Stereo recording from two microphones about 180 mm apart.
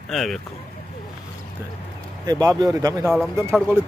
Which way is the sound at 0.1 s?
Centre (ahead or behind).